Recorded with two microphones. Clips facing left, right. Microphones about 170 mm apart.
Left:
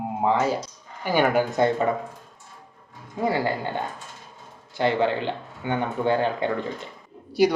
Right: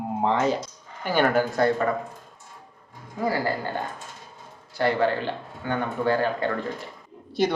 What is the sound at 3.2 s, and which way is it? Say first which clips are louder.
Speech: left 1 dB; 20° left (ahead or behind).